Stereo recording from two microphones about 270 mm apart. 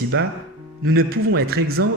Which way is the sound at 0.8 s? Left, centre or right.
Right.